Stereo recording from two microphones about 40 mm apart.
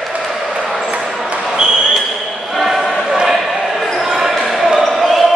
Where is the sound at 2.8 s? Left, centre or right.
Centre.